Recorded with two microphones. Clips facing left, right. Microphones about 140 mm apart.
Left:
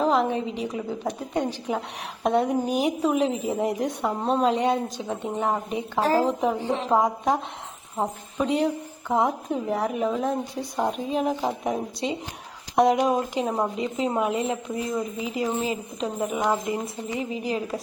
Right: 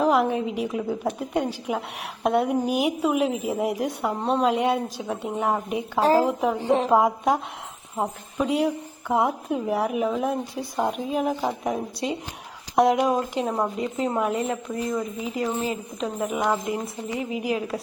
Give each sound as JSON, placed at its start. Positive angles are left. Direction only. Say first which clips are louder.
{"t": 0.0, "sound": "a woman's voice", "louder": "right 1 dB", "side_deg": -5}
{"t": 6.0, "sound": "a woman's voice", "louder": "right 3 dB", "side_deg": -30}
{"t": 6.2, "sound": "a woman's voice", "louder": "right 1 dB", "side_deg": 0}
{"t": 13.1, "sound": "a woman's voice", "louder": "even", "side_deg": 15}
{"t": 13.5, "sound": "a woman's voice", "louder": "even", "side_deg": 0}
{"t": 13.8, "sound": "a woman's voice", "louder": "even", "side_deg": 15}
{"t": 14.3, "sound": "a woman's voice", "louder": "even", "side_deg": 0}
{"t": 16.0, "sound": "a woman's voice", "louder": "right 1 dB", "side_deg": 0}